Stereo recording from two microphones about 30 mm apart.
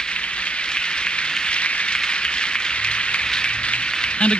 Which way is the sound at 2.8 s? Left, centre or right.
Left.